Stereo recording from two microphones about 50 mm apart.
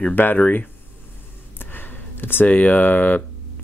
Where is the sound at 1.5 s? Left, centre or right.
Left.